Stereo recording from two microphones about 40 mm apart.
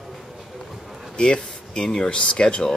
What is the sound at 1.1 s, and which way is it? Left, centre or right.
Speech, left.